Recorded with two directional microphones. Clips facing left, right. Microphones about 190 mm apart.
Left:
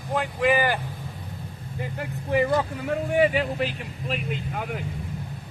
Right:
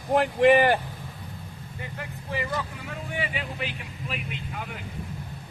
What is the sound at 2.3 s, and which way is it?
A man's voice, 50° left (ahead or behind).